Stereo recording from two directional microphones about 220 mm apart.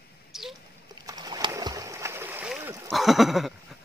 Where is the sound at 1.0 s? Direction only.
15° right (ahead or behind).